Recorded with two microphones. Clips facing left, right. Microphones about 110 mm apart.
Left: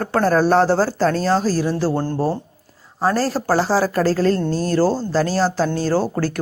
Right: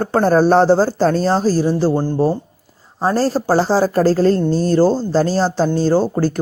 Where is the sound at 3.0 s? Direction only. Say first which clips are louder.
Right 3 dB; 25° right (ahead or behind).